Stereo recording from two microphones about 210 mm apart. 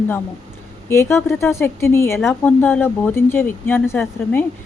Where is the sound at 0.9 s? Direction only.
10° left (ahead or behind).